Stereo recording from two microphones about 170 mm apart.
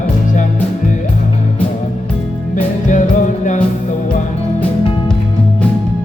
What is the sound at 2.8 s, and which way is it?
Music, 45° left (ahead or behind).